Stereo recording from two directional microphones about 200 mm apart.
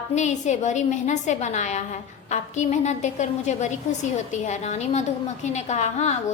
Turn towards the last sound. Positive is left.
turn(degrees=35)  # may be behind; listen again after turning